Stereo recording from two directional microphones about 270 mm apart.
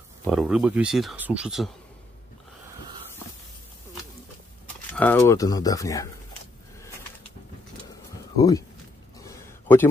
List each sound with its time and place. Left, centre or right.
0.2 s speech: centre
4.9 s speech: centre
8.4 s speech: centre
9.2 s a sound: centre